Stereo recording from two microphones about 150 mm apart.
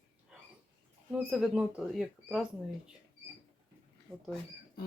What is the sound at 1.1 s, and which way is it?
Speech, 5° right (ahead or behind).